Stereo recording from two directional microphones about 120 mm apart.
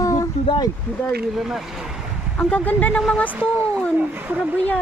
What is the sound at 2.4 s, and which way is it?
Speech, 10° left (ahead or behind).